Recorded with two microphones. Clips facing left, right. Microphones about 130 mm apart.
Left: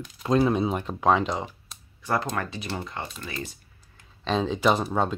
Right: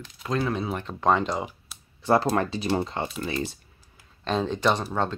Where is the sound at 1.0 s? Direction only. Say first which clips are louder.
Even; centre (ahead or behind).